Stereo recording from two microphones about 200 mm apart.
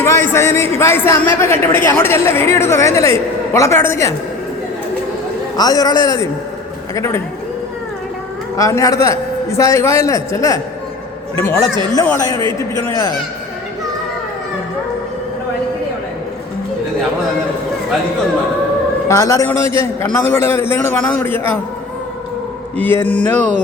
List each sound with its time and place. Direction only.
0.0 s a man's voice: 10° left (ahead or behind)
5.5 s a man's voice: 20° left (ahead or behind)
8.5 s a man's voice: 15° left (ahead or behind)
11.9 s a man's voice: 15° left (ahead or behind)
19.0 s a man's voice: 15° left (ahead or behind)
22.8 s a man's voice: 10° left (ahead or behind)